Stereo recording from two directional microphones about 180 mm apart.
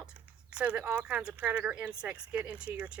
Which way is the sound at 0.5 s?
5° right (ahead or behind).